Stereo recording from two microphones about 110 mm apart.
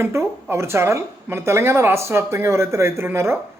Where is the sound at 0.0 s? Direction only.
25° right (ahead or behind).